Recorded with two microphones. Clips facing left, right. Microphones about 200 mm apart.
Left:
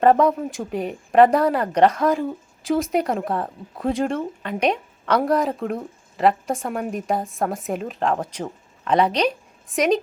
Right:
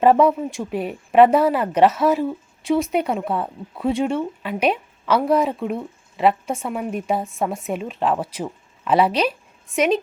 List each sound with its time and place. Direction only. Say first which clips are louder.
0.0 s speech: right 1 dB; 5° right (ahead or behind)